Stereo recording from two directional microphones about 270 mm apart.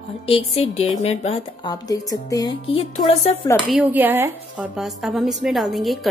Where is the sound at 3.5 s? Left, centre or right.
Centre.